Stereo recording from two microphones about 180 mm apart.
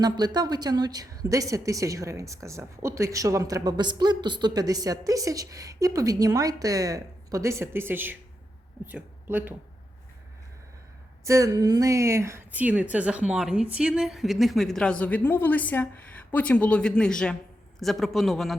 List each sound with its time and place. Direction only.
0.0 s a woman's voice: 20° right (ahead or behind)
11.2 s a woman's voice: 15° right (ahead or behind); by 18.5 s centre (ahead or behind)